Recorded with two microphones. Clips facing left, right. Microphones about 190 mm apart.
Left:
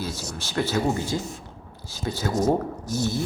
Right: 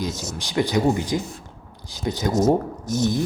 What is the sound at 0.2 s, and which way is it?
Speech, 15° right (ahead or behind).